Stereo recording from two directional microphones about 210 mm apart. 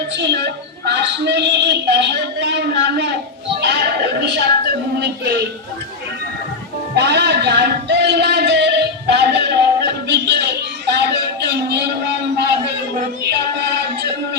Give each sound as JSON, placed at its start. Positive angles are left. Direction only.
{"t": 0.2, "sound": "a sound", "side_deg": -55}
{"t": 3.6, "sound": "music", "side_deg": -55}
{"t": 6.9, "sound": "music", "side_deg": -55}